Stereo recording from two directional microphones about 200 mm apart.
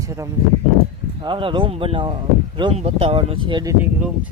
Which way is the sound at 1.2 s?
25° right (ahead or behind).